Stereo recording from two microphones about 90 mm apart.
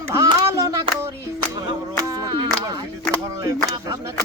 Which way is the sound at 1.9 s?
50° right (ahead or behind).